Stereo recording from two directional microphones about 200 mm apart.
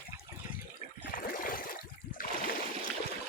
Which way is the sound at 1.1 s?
45° left (ahead or behind).